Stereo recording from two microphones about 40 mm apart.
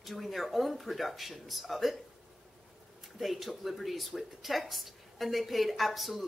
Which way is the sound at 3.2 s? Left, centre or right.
Centre.